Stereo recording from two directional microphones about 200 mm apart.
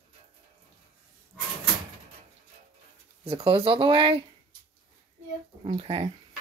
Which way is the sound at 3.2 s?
25° right (ahead or behind).